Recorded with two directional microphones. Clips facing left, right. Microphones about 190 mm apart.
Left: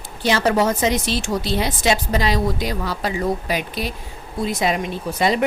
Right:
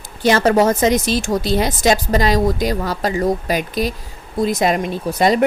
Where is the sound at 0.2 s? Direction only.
45° right (ahead or behind).